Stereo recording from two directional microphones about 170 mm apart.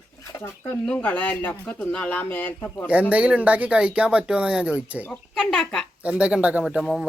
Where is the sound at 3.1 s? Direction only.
10° right (ahead or behind).